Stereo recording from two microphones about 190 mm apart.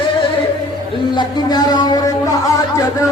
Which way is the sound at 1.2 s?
20° left (ahead or behind).